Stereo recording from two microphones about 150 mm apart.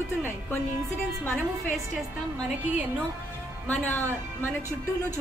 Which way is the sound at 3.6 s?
15° left (ahead or behind).